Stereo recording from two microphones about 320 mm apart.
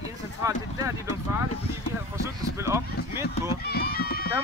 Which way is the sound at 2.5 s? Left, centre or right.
Centre.